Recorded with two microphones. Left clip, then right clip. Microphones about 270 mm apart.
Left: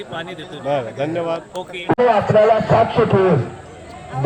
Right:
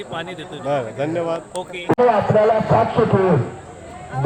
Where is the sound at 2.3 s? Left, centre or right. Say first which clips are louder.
Left 2 dB; left.